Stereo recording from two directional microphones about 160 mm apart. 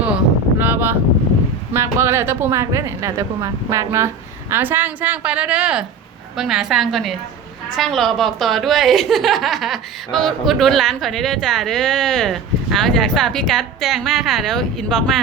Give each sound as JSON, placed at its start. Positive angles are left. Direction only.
{"t": 0.6, "sound": "wind noise", "side_deg": -15}
{"t": 1.7, "sound": "a woman's voice", "side_deg": -15}